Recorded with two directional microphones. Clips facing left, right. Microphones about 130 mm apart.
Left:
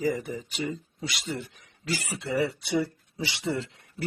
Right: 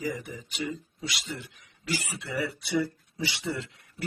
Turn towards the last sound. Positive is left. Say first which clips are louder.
# left 4 dB
turn(degrees=30)  # may be behind; listen again after turning